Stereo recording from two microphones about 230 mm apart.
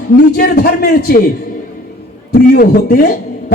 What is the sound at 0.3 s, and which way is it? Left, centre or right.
Speech, left.